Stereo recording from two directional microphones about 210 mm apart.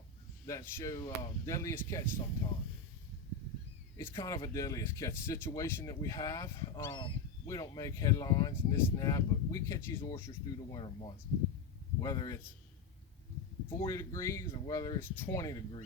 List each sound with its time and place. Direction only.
0.4 s speech: 15° left (ahead or behind)
3.9 s a man's voice: 15° left (ahead or behind)
13.8 s speech: 15° left (ahead or behind)